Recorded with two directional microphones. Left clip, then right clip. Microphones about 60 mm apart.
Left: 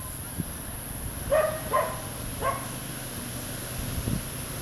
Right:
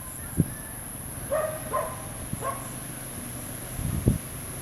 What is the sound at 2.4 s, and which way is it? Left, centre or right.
Dog, left.